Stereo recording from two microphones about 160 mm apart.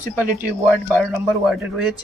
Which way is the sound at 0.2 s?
15° right (ahead or behind).